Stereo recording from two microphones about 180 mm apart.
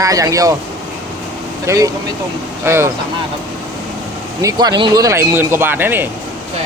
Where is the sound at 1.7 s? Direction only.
15° right (ahead or behind).